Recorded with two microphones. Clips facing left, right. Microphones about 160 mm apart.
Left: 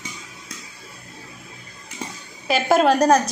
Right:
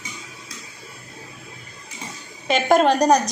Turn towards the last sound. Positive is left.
turn(degrees=5)  # may be behind; listen again after turning